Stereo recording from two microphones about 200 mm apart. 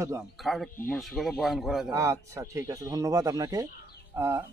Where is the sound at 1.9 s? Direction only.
15° right (ahead or behind).